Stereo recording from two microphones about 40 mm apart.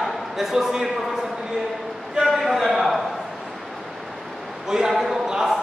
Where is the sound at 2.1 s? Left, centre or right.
Centre.